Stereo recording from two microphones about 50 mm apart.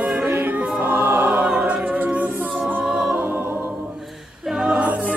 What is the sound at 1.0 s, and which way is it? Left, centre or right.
Choir, right.